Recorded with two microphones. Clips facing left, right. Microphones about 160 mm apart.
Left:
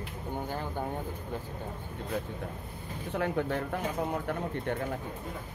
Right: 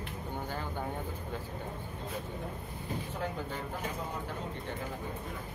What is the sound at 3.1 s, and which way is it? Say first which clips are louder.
Speech: left 11 dB; 70° left (ahead or behind).